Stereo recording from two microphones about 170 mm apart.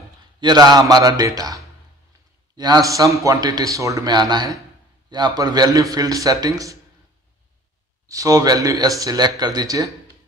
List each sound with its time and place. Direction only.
0.4 s a man's voice: 25° right (ahead or behind)
8.1 s a man's voice: 20° right (ahead or behind)